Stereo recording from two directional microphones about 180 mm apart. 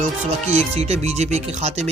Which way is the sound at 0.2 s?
35° right (ahead or behind).